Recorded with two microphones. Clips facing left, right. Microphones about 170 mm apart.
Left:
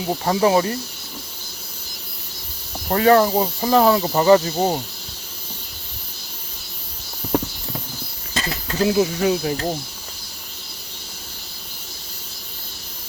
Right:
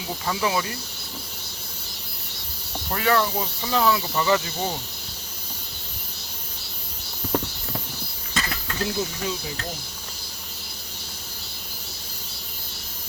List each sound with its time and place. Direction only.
0.0 s speech: 40° left (ahead or behind)
2.9 s speech: 40° left (ahead or behind)
8.3 s a sound: 30° left (ahead or behind)
8.9 s speech: 70° left (ahead or behind)